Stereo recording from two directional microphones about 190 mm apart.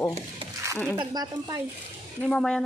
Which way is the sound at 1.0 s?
20° right (ahead or behind).